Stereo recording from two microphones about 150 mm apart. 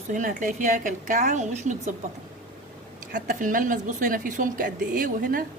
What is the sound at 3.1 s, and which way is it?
Speech, 60° right (ahead or behind).